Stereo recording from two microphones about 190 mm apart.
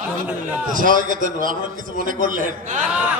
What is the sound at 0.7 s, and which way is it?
A man's voice, 45° right (ahead or behind).